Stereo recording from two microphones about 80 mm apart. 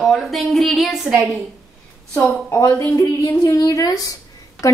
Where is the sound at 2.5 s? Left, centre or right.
Left.